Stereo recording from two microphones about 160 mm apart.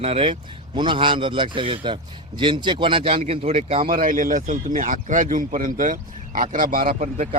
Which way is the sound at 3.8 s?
60° right (ahead or behind).